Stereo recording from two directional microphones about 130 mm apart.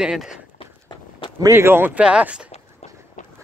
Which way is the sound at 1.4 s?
20° right (ahead or behind).